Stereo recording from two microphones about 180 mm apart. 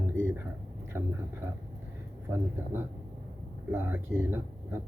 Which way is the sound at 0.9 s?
10° right (ahead or behind).